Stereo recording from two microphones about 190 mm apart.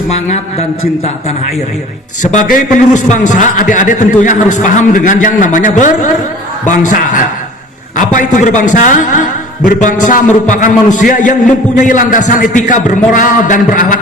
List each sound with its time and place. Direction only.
2.3 s a man's voice: 40° left (ahead or behind)